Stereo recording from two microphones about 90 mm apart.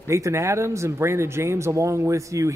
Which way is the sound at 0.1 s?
35° right (ahead or behind).